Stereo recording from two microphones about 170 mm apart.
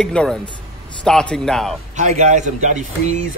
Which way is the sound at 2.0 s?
45° right (ahead or behind).